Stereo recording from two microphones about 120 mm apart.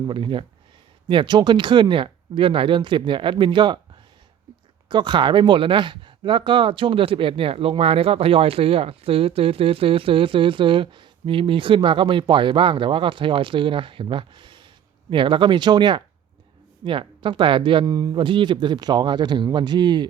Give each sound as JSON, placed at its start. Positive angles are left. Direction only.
{"t": 0.1, "sound": "speech", "side_deg": -45}
{"t": 4.9, "sound": "speech", "side_deg": -40}
{"t": 17.8, "sound": "speech", "side_deg": -30}